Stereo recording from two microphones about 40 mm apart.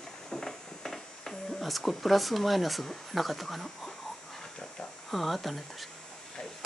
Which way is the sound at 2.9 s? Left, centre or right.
Centre.